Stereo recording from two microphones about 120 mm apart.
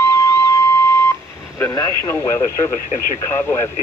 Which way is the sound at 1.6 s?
25° left (ahead or behind).